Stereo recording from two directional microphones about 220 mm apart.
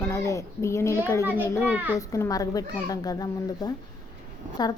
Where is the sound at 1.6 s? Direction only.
10° right (ahead or behind).